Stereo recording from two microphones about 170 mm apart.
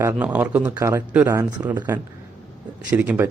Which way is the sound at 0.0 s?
10° right (ahead or behind).